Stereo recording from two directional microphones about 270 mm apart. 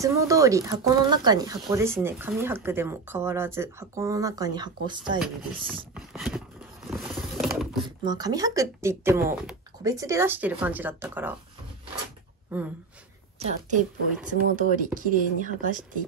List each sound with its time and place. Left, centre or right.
0.0 s speech: centre
5.9 s a sound: centre
7.3 s mechanisms: centre
8.0 s speech: centre
12.5 s speech: centre
13.6 s speech: right